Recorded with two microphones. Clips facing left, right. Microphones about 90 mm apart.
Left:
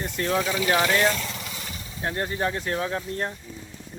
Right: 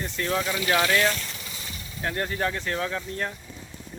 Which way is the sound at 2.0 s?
20° left (ahead or behind).